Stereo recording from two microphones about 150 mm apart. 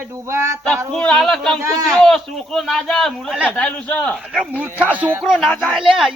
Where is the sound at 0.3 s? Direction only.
20° right (ahead or behind).